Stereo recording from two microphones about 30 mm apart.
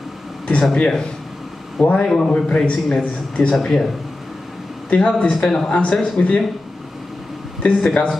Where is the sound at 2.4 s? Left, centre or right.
Left.